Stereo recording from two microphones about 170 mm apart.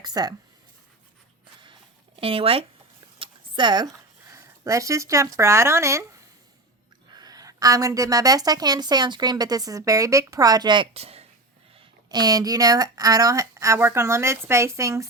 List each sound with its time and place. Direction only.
0.0 s a sound: 25° right (ahead or behind)
2.1 s speech: 35° right (ahead or behind); by 6.1 s 15° right (ahead or behind)
7.1 s a woman's voice: 20° right (ahead or behind)
12.0 s speech: 20° right (ahead or behind)